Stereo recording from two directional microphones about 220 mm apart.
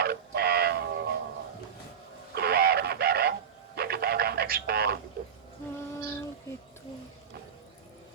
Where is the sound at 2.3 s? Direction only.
45° right (ahead or behind).